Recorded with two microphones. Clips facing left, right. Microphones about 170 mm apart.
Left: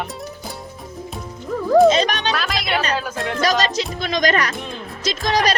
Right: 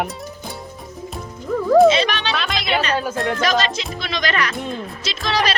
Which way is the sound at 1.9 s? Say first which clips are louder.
Left 1 dB; 45° left (ahead or behind).